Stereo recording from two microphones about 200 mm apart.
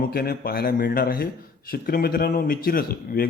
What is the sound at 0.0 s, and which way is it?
Speech, 50° left (ahead or behind).